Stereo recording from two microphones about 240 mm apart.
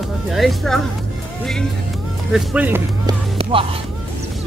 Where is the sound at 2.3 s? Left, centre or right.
Centre.